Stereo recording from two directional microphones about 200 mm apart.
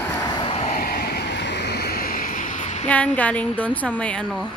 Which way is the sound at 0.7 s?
45° left (ahead or behind).